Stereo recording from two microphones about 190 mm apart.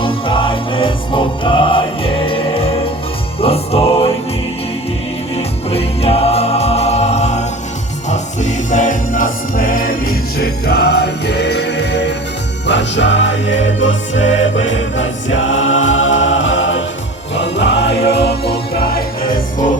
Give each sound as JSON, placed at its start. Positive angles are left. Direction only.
{"t": 0.0, "sound": "music", "side_deg": 25}
{"t": 5.4, "sound": "music", "side_deg": 30}
{"t": 14.6, "sound": "choir", "side_deg": 90}
{"t": 17.3, "sound": "music", "side_deg": 65}